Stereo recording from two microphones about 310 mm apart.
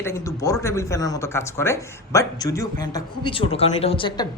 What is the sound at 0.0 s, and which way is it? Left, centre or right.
Speech, centre.